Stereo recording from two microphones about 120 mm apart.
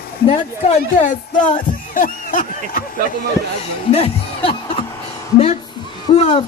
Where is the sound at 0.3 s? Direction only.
75° left (ahead or behind).